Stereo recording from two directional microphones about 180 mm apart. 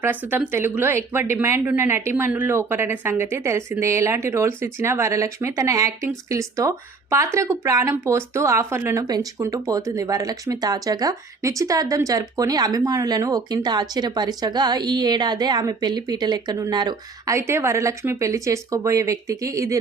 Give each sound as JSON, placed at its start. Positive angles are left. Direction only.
{"t": 0.0, "sound": "speech", "side_deg": -10}